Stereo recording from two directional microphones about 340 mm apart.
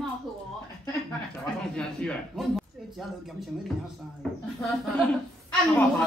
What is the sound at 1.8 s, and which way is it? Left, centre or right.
Speech, centre.